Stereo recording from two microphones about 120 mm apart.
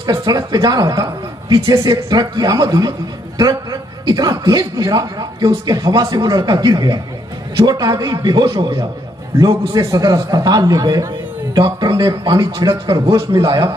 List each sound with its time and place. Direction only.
0.0 s a man's voice: 35° right (ahead or behind)
4.1 s a man's voice: 35° right (ahead or behind)